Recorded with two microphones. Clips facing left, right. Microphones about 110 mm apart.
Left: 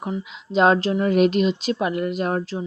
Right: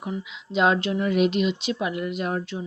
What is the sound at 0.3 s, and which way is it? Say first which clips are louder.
Speech: left 4 dB; 40° left (ahead or behind).